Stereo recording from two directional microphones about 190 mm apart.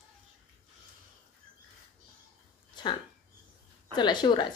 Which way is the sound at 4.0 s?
25° left (ahead or behind).